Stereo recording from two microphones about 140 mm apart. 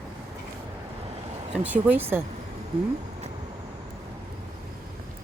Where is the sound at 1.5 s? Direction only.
10° right (ahead or behind).